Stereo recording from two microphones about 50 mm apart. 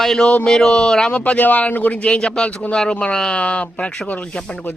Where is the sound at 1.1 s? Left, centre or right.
Left.